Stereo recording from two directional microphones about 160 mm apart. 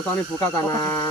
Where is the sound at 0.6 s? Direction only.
15° left (ahead or behind).